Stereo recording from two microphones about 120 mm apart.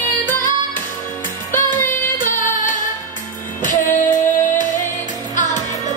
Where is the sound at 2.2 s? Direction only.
90° left.